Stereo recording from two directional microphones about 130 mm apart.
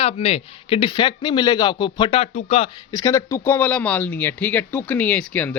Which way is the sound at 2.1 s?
50° left (ahead or behind).